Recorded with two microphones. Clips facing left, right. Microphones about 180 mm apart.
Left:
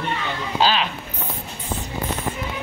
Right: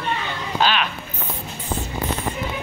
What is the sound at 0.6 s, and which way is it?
Speech, 30° left (ahead or behind).